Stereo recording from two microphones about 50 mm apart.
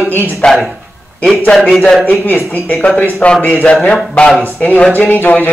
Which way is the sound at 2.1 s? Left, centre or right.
Left.